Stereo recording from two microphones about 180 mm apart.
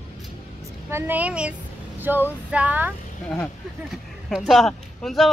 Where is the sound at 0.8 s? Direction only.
15° right (ahead or behind).